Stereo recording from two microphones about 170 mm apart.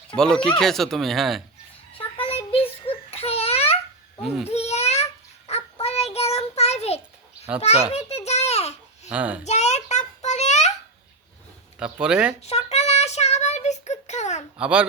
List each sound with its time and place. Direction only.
0.2 s speech: 5° left (ahead or behind)
1.9 s a sound: 35° left (ahead or behind)
4.2 s a child's voice: 5° right (ahead or behind)
4.4 s babbling: 40° left (ahead or behind)
5.5 s child singing: 35° left (ahead or behind)
7.9 s a sound: 40° left (ahead or behind)
9.0 s a child's voice: 10° right (ahead or behind)
9.4 s child singing: 40° left (ahead or behind)
11.8 s speech: 5° right (ahead or behind)
12.4 s child singing: 40° left (ahead or behind)
14.6 s speech: 5° right (ahead or behind)